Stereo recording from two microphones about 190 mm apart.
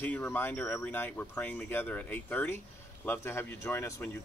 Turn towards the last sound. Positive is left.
turn(degrees=10)  # may be behind; listen again after turning